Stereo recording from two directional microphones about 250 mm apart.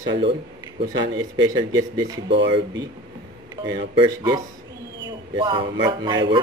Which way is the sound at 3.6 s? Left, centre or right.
Centre.